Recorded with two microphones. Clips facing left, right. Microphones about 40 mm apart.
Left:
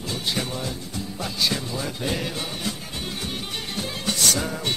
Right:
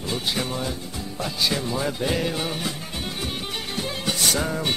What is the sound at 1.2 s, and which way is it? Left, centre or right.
Speech, centre.